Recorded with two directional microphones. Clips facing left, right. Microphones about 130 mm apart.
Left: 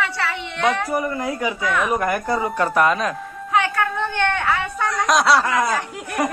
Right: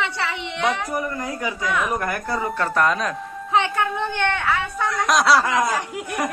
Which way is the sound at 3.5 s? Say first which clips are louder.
Left 1 dB; 20° right (ahead or behind).